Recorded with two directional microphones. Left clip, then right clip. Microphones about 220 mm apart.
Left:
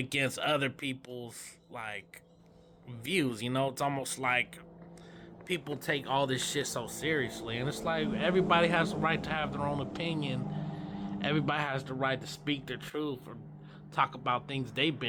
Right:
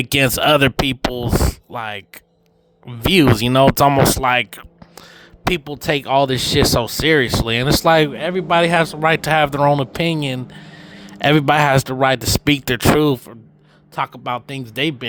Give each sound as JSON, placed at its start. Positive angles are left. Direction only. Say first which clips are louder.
{"t": 0.0, "sound": "speech", "louder": "right 16 dB", "side_deg": -50}
{"t": 13.9, "sound": "speech", "louder": "right 8 dB", "side_deg": -40}